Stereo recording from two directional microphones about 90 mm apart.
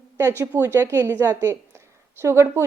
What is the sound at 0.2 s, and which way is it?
A woman's voice, 25° right (ahead or behind).